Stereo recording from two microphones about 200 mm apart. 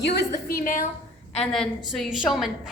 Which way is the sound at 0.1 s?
55° left (ahead or behind).